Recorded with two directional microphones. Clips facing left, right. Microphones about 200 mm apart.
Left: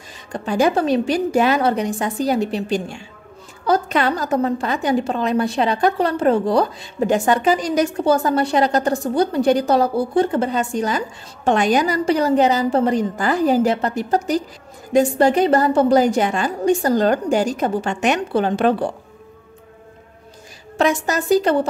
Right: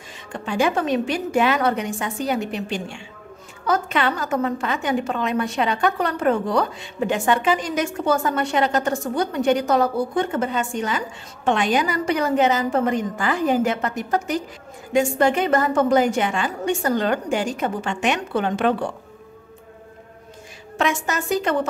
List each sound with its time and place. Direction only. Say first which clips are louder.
0.3 s a woman's voice: left 4 dB; 40° left (ahead or behind)
20.7 s a woman's voice: left 4 dB; 35° left (ahead or behind)